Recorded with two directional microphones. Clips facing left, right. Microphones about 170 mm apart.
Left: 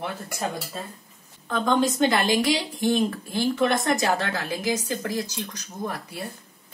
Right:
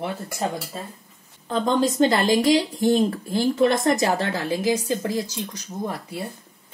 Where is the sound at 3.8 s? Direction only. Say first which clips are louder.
Right 3 dB; 25° right (ahead or behind).